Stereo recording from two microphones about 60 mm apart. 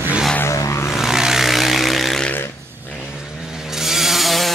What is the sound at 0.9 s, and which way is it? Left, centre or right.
Vehicle, centre.